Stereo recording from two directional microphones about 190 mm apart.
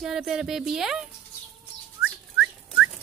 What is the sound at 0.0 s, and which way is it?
A woman's voice, 5° right (ahead or behind).